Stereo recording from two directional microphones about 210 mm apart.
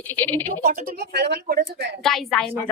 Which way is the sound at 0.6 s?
40° right (ahead or behind).